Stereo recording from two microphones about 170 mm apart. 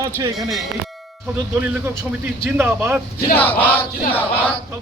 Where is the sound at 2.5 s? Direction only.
15° right (ahead or behind).